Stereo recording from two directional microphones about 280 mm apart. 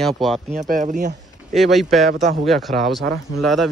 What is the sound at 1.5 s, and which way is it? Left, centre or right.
Speech, centre.